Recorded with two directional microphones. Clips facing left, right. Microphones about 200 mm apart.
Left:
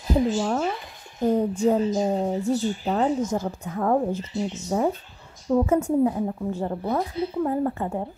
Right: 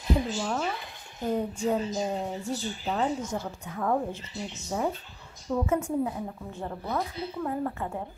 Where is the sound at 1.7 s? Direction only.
45° left (ahead or behind).